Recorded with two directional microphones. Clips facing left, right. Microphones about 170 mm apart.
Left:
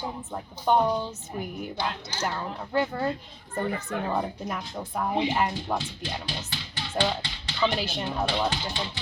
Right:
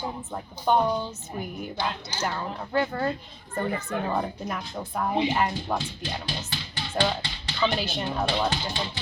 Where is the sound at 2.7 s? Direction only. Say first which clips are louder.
Even; 10° left (ahead or behind).